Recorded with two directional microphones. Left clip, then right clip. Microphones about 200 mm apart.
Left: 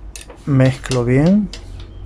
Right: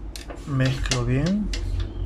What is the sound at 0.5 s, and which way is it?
Speech, 35° left (ahead or behind).